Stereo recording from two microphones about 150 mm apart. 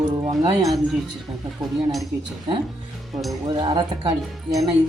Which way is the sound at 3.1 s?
Centre (ahead or behind).